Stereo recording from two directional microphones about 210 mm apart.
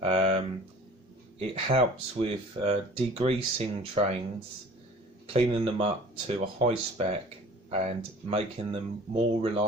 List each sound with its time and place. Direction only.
0.0 s a sound: 30° right (ahead or behind)
1.4 s speech: 25° right (ahead or behind)
5.2 s speech: 25° right (ahead or behind)